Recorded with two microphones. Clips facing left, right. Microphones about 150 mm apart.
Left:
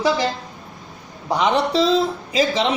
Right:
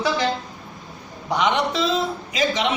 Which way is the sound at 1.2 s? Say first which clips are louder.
Left 2 dB; 35° left (ahead or behind).